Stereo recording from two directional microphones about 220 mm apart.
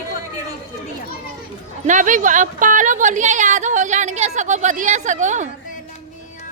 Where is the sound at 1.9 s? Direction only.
35° right (ahead or behind).